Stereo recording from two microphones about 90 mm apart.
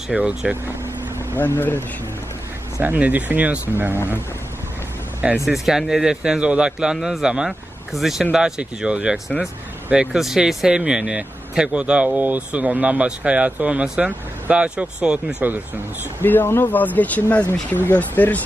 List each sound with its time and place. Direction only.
0.1 s speech: 15° right (ahead or behind)
1.4 s speech: 25° left (ahead or behind)
2.8 s speech: 20° right (ahead or behind)
5.5 s speech: 5° right (ahead or behind)
16.2 s speech: 20° left (ahead or behind)